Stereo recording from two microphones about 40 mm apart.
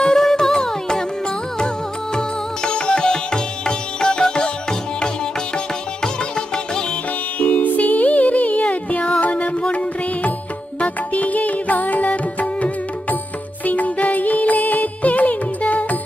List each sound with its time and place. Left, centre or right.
0.0 s music: centre
2.1 s music: centre
7.3 s music: left